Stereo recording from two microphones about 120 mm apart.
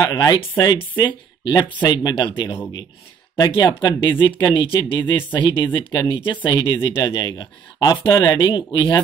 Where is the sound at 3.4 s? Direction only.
40° left (ahead or behind).